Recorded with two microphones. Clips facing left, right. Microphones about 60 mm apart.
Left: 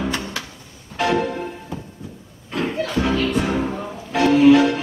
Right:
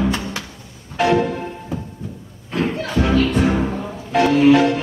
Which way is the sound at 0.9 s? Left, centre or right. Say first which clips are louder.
Right 3 dB; centre.